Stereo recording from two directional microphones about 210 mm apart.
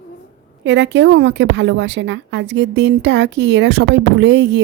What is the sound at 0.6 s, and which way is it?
A woman's voice, 55° right (ahead or behind).